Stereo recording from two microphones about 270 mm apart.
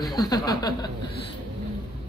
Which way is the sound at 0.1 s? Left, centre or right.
Centre.